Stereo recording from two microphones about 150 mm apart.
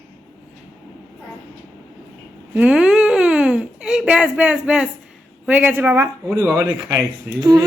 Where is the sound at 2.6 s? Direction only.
5° right (ahead or behind).